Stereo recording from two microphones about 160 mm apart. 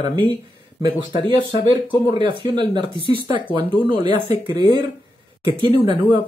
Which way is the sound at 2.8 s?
35° left (ahead or behind).